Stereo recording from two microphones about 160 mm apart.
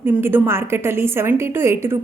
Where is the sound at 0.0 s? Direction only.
15° right (ahead or behind).